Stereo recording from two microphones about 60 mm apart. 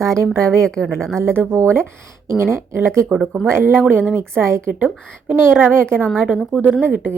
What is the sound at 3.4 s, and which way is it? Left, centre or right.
A woman's voice, right.